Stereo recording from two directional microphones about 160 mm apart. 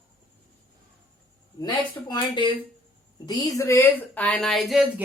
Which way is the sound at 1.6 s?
25° left (ahead or behind).